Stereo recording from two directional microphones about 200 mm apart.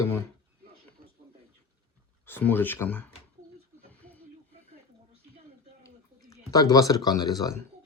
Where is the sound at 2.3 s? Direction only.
10° left (ahead or behind).